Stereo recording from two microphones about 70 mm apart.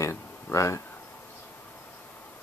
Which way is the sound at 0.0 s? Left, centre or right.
Left.